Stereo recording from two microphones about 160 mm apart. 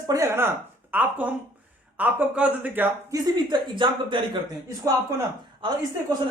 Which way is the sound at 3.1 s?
25° right (ahead or behind).